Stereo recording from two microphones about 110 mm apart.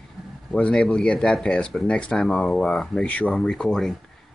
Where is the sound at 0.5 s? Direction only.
10° left (ahead or behind).